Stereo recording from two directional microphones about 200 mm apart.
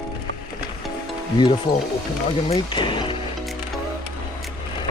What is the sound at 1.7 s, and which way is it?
Speech, 25° left (ahead or behind).